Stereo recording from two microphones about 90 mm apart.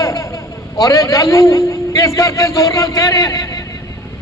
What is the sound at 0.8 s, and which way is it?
A man's voice, 40° left (ahead or behind).